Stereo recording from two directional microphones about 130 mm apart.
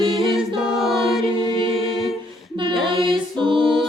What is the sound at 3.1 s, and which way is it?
Music, 40° right (ahead or behind).